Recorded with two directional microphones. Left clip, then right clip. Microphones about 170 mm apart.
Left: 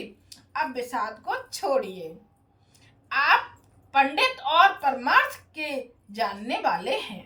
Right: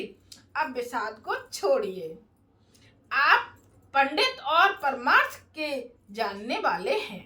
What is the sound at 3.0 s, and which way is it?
A child's voice, 10° left (ahead or behind).